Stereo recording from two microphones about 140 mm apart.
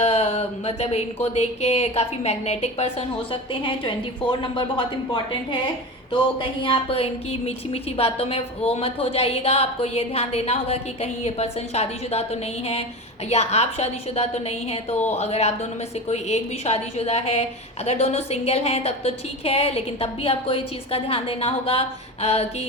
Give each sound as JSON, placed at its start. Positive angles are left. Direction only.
{"t": 0.0, "sound": "a woman's voice", "side_deg": 55}
{"t": 3.5, "sound": "a woman's voice", "side_deg": 35}
{"t": 6.6, "sound": "a woman's voice", "side_deg": 40}